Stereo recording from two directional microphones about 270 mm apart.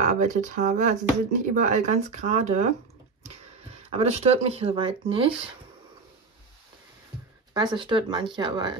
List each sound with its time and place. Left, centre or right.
0.0 s speech: right
3.7 s speech: right
7.5 s speech: centre